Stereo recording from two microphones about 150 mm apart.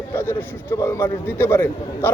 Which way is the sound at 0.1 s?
15° left (ahead or behind).